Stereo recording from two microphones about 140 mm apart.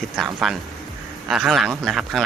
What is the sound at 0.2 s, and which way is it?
Speech, centre (ahead or behind).